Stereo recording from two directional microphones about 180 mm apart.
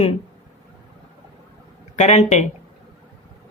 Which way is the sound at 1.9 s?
40° left (ahead or behind).